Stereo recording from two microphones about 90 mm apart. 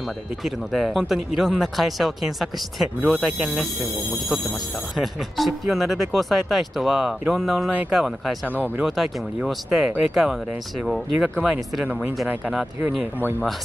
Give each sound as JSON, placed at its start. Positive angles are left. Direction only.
{"t": 0.4, "sound": "speech", "side_deg": 0}
{"t": 4.9, "sound": "speech", "side_deg": 0}
{"t": 11.8, "sound": "speech", "side_deg": -15}